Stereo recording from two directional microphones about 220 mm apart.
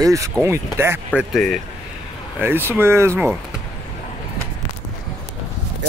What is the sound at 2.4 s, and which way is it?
Speech, 10° right (ahead or behind).